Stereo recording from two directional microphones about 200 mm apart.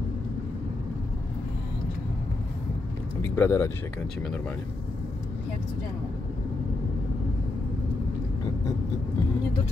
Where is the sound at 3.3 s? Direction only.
15° left (ahead or behind).